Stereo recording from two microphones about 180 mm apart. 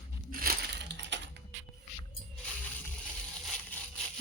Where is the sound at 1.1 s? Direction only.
80° right.